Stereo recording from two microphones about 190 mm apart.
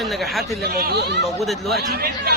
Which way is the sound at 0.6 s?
50° right (ahead or behind).